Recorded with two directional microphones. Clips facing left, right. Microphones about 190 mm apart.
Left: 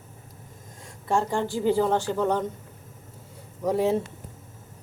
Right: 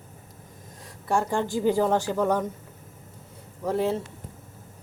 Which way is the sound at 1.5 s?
15° right (ahead or behind).